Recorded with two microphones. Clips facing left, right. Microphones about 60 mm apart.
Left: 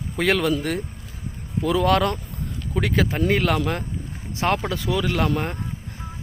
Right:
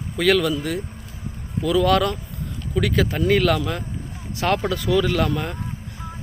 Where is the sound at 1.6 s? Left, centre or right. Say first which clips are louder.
Right 1 dB; left.